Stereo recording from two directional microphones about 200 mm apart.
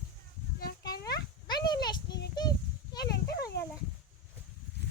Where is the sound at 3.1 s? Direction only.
55° left (ahead or behind).